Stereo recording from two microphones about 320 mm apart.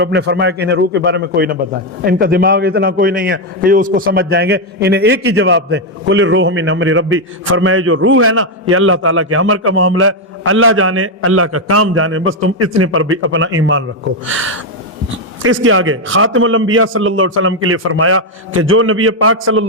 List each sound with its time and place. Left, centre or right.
0.0 s a man's voice: right